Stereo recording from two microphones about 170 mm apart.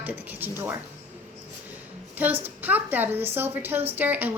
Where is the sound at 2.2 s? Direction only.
10° right (ahead or behind).